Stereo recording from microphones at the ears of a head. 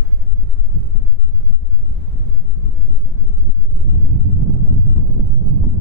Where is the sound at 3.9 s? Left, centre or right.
Right.